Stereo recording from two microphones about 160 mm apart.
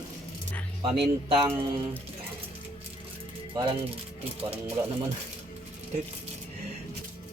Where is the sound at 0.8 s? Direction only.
35° right (ahead or behind).